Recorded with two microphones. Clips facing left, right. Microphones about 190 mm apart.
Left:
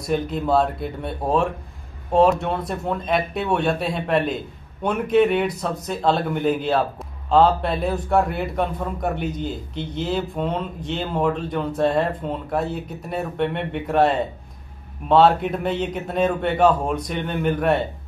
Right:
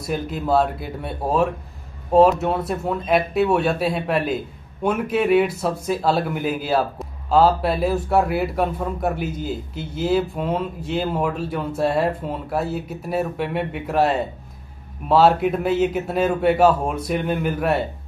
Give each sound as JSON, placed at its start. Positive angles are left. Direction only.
{"t": 0.0, "sound": "a man's voice", "side_deg": -5}